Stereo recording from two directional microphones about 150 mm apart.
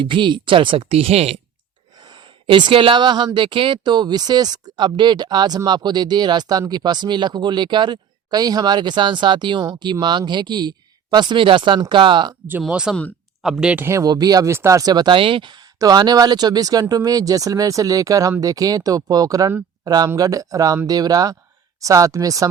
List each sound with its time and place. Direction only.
0.0 s speech: 30° right (ahead or behind)
2.0 s speech: 30° right (ahead or behind)
12.6 s speech: 5° right (ahead or behind)
13.8 s speech: 20° right (ahead or behind)